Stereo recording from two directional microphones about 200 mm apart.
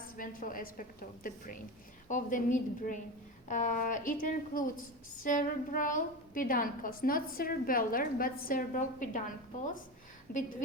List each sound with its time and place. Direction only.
0.2 s a woman's voice: 45° left (ahead or behind)
10.3 s a woman's voice: 45° left (ahead or behind)